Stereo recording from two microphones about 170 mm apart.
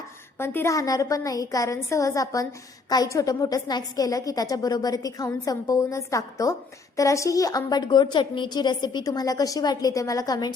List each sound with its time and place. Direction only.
0.3 s a woman's voice: 15° left (ahead or behind)